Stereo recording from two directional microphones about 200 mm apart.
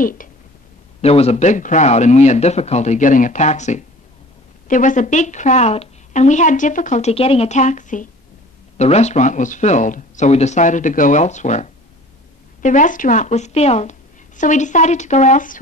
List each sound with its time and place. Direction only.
0.0 s speech: 45° left (ahead or behind)
1.0 s a woman's voice: 30° left (ahead or behind)